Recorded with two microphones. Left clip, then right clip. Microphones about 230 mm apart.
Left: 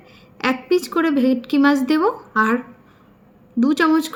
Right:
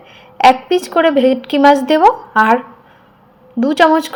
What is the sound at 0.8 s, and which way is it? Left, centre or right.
Speech, centre.